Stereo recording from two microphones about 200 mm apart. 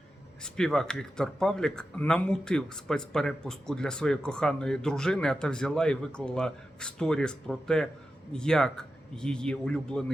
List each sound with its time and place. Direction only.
0.4 s speech: 5° left (ahead or behind)